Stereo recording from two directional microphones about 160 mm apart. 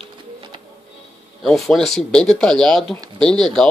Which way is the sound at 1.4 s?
Centre (ahead or behind).